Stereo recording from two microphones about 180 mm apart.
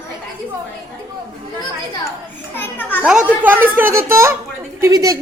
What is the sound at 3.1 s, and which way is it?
A woman's voice, 5° right (ahead or behind).